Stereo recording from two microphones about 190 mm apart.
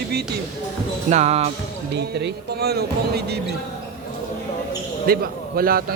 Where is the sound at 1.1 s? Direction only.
35° right (ahead or behind).